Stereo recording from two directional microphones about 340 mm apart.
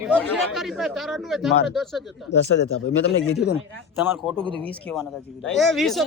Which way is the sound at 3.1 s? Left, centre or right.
Left.